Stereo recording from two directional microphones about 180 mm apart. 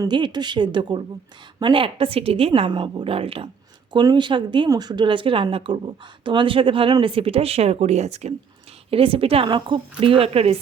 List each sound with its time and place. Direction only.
0.0 s a woman's voice: 25° right (ahead or behind)